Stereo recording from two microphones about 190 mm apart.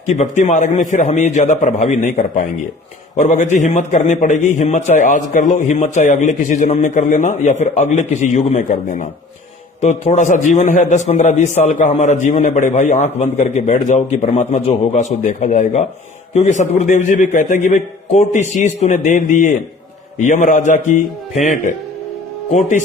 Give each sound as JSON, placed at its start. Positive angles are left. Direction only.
{"t": 0.0, "sound": "a man's voice", "side_deg": 40}